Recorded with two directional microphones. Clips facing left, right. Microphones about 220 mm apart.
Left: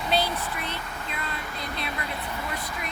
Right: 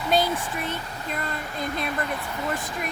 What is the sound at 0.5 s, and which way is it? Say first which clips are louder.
Speech: right 3 dB; 45° right (ahead or behind).